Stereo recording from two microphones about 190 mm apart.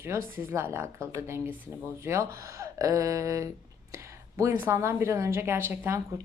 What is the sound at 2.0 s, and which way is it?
A woman's voice, 15° right (ahead or behind).